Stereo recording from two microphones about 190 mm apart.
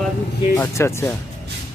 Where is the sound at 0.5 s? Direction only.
15° left (ahead or behind).